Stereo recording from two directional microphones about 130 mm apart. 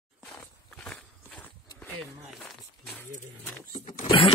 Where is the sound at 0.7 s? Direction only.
5° left (ahead or behind).